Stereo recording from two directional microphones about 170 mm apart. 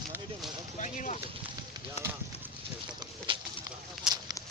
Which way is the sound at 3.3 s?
30° right (ahead or behind).